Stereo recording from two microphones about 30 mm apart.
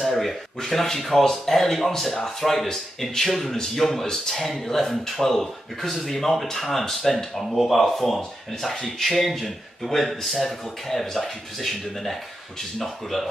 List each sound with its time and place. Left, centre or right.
0.0 s speech: centre
3.5 s speech: centre
5.9 s speech: centre